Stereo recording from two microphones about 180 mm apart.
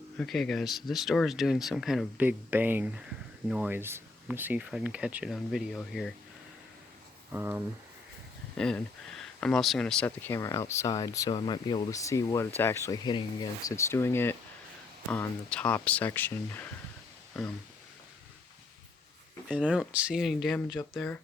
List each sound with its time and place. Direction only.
0.2 s speech: centre (ahead or behind)
7.3 s speech: 10° right (ahead or behind)
8.5 s speech: 5° left (ahead or behind)
19.5 s speech: 5° right (ahead or behind)